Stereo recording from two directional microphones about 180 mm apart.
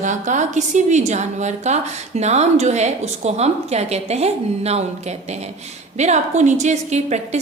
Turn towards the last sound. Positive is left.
turn(degrees=-40)  # may be behind; listen again after turning